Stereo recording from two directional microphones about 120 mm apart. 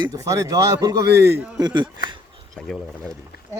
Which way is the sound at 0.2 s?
25° right (ahead or behind).